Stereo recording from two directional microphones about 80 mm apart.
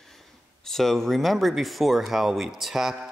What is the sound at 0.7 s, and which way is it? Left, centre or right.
Speech, centre.